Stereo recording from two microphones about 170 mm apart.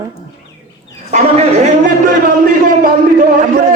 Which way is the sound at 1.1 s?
45° right (ahead or behind).